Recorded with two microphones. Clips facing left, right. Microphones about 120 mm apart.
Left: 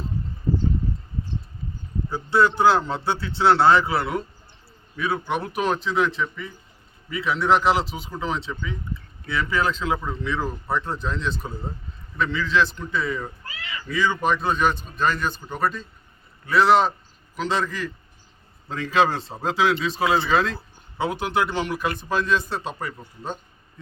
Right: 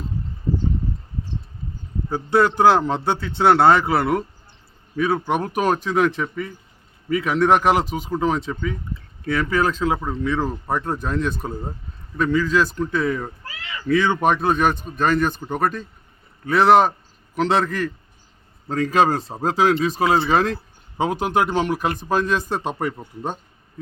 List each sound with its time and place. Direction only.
2.0 s a man's voice: 50° right (ahead or behind)
18.7 s a man's voice: 45° right (ahead or behind)